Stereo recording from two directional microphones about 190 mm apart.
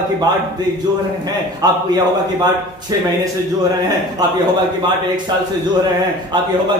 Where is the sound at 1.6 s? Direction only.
20° right (ahead or behind).